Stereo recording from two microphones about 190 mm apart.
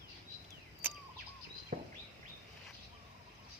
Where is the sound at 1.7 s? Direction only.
45° right (ahead or behind).